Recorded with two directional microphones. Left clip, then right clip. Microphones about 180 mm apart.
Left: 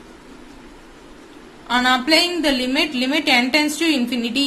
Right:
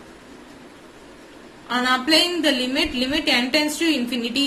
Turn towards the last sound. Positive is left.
turn(degrees=25)  # may be behind; listen again after turning